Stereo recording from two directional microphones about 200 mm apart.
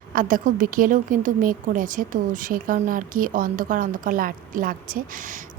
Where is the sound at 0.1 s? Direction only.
45° right (ahead or behind).